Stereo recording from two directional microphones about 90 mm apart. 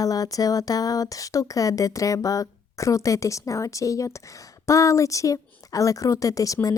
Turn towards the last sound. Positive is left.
turn(degrees=40)  # may be behind; listen again after turning